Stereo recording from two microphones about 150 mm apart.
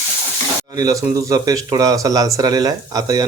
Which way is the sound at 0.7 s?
25° right (ahead or behind).